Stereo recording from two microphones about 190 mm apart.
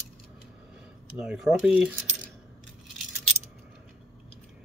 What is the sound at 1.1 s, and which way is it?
Speech, 5° right (ahead or behind).